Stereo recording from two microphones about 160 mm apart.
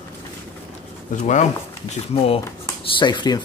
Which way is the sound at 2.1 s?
35° left (ahead or behind).